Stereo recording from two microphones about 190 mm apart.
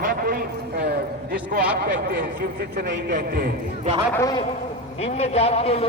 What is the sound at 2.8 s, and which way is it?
Speech, 65° right (ahead or behind).